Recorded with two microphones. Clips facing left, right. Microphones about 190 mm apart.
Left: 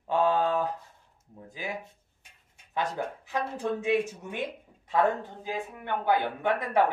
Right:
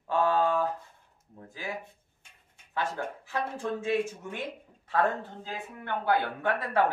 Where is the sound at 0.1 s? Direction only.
20° left (ahead or behind).